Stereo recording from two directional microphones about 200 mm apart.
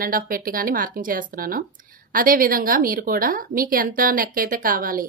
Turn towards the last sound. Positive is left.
turn(degrees=-45)  # may be behind; listen again after turning